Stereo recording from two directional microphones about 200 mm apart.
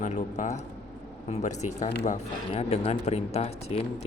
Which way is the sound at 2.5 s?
30° left (ahead or behind).